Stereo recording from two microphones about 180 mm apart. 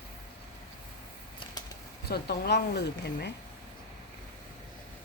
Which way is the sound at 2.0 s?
60° left (ahead or behind).